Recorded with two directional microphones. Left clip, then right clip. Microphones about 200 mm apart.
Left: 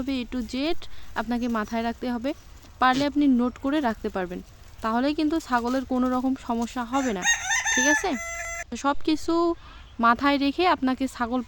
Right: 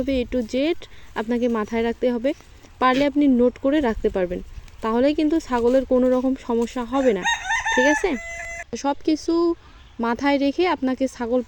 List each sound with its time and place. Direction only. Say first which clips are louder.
0.0 s speech: right 8 dB; centre (ahead or behind)
7.3 s chicken: right 2 dB; 45° left (ahead or behind)
7.8 s speech: right 4 dB; centre (ahead or behind)